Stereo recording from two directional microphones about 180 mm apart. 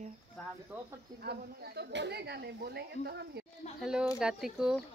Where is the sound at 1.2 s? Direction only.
65° right (ahead or behind).